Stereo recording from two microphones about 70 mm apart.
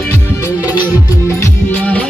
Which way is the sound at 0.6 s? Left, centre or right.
Right.